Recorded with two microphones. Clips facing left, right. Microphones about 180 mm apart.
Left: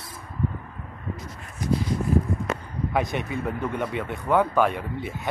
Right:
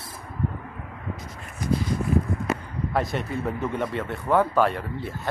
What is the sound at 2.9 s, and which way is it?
Speech, centre (ahead or behind).